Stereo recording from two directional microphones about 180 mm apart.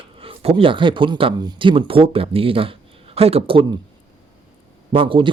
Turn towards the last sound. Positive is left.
turn(degrees=-30)  # may be behind; listen again after turning